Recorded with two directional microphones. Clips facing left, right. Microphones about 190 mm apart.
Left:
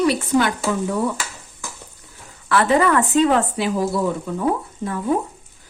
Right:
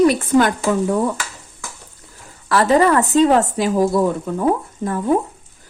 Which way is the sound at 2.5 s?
40° right (ahead or behind).